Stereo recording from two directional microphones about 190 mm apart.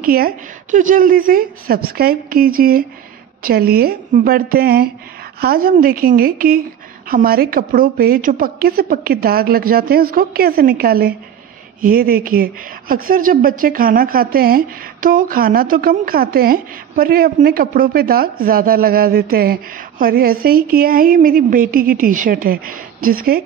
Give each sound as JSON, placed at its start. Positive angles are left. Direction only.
{"t": 0.0, "sound": "speech", "side_deg": -50}